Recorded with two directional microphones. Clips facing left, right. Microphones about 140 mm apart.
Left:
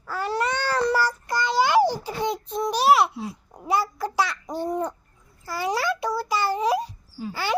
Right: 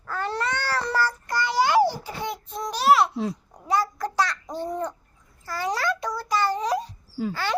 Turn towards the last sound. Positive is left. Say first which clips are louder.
# even
turn(degrees=10)  # may be behind; listen again after turning